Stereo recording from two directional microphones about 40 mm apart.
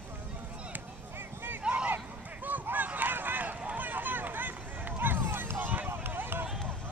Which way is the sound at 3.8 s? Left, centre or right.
Right.